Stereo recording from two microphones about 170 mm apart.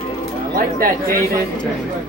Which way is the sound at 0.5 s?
55° right (ahead or behind).